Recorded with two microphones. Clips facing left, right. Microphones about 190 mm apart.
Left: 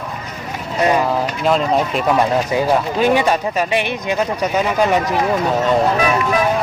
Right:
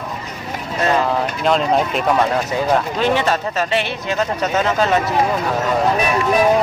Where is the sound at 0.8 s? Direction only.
15° left (ahead or behind).